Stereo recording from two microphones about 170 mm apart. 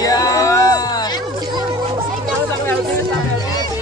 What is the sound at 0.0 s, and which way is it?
Music, 20° left (ahead or behind).